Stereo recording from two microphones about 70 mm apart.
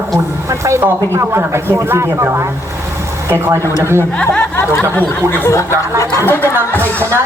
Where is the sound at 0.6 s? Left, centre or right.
Right.